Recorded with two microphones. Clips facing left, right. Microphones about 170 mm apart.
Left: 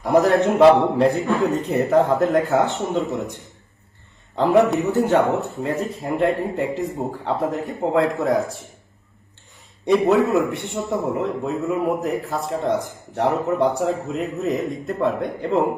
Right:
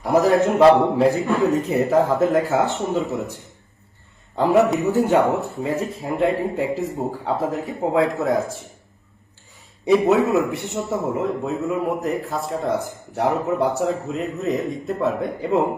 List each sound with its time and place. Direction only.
0.0 s a man's voice: centre (ahead or behind)
4.4 s a man's voice: 5° right (ahead or behind)
5.2 s speech: 35° right (ahead or behind)
5.6 s a man's voice: centre (ahead or behind)
9.8 s a man's voice: centre (ahead or behind)